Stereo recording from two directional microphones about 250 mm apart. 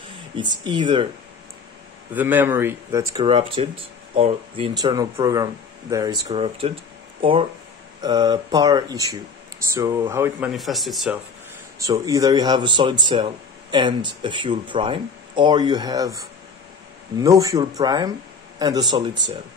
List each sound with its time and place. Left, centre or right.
0.7 s speech: centre
2.1 s speech: centre
11.8 s speech: centre